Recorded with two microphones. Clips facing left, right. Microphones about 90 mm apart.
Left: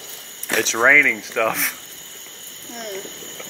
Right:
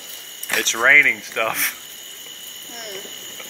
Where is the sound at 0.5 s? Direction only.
Centre (ahead or behind).